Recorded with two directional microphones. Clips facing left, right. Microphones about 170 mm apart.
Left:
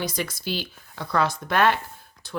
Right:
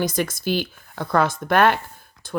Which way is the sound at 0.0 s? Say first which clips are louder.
Right 6 dB; 50° right (ahead or behind).